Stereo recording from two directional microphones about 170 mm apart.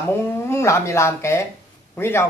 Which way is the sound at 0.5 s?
15° left (ahead or behind).